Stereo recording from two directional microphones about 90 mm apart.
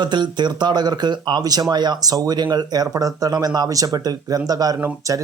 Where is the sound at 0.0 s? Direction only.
55° right (ahead or behind).